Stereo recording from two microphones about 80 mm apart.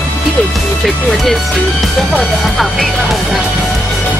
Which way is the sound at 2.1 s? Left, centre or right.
Centre.